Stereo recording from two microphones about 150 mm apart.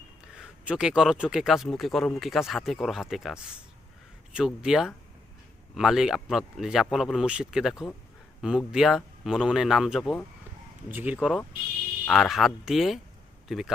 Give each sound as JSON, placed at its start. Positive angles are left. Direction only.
{"t": 0.3, "sound": "speech", "side_deg": -5}
{"t": 10.8, "sound": "speech", "side_deg": -10}